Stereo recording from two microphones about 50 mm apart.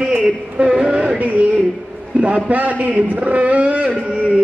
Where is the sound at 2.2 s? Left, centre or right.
Right.